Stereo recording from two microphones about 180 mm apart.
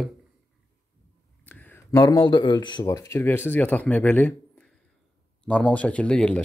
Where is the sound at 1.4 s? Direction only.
10° left (ahead or behind).